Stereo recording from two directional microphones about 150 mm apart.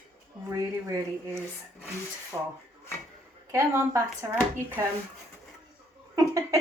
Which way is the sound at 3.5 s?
15° right (ahead or behind).